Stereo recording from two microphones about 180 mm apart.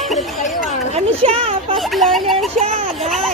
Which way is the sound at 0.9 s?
35° right (ahead or behind).